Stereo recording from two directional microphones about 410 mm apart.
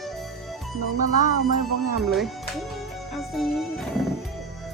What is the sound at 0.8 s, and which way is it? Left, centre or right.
Speech, right.